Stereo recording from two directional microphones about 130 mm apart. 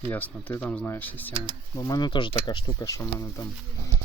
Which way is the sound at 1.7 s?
30° left (ahead or behind).